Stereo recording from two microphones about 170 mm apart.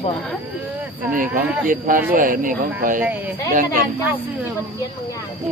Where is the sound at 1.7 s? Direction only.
55° right (ahead or behind).